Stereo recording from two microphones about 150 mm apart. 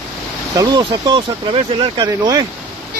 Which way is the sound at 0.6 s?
30° right (ahead or behind).